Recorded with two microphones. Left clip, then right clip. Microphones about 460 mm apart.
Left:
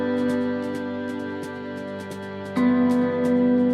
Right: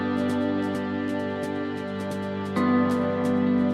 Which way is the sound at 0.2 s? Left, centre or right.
Centre.